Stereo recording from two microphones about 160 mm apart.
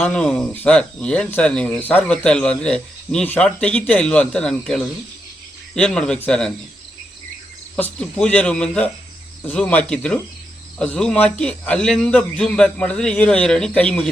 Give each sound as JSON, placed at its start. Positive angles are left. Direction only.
{"t": 0.0, "sound": "speech", "side_deg": 5}
{"t": 7.9, "sound": "speech", "side_deg": 5}